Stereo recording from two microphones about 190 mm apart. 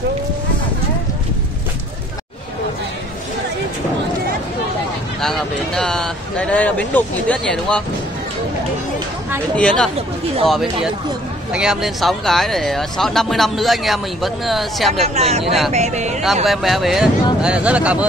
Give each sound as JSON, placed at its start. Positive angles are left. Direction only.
{"t": 5.2, "sound": "speech", "side_deg": 0}
{"t": 9.6, "sound": "speech", "side_deg": 5}
{"t": 15.1, "sound": "speech", "side_deg": -35}
{"t": 16.4, "sound": "speech", "side_deg": 0}